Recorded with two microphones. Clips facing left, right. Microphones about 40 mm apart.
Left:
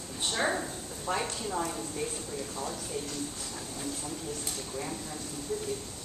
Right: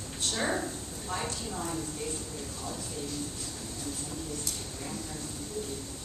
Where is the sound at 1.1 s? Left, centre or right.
Left.